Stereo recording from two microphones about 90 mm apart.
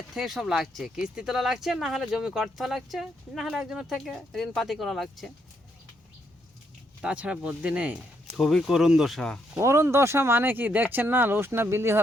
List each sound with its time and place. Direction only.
0.1 s speech: centre (ahead or behind)
7.0 s speech: 10° right (ahead or behind)
8.4 s speech: centre (ahead or behind)
9.6 s speech: 30° right (ahead or behind)